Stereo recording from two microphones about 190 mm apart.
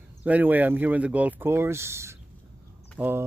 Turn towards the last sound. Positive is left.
turn(degrees=-10)  # may be behind; listen again after turning